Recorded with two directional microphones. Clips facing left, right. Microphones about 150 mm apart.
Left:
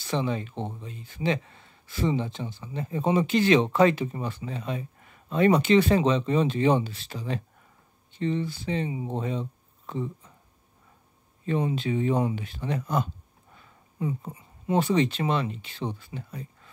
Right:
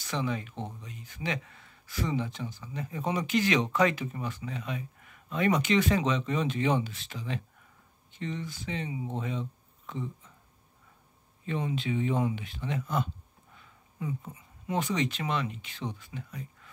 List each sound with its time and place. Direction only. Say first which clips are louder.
0.0 s speech: left 4 dB; 30° left (ahead or behind)
11.4 s speech: left 5 dB; 40° left (ahead or behind)